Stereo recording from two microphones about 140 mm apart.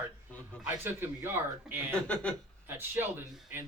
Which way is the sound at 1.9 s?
10° left (ahead or behind).